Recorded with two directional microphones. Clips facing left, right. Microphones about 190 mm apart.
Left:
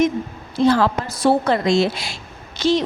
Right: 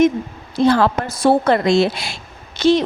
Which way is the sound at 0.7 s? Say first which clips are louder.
Right 2 dB; 55° right (ahead or behind).